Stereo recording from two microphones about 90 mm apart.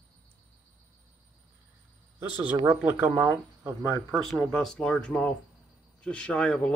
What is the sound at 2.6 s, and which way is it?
Speech, 25° right (ahead or behind).